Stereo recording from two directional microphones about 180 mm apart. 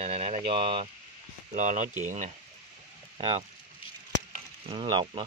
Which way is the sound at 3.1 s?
30° right (ahead or behind).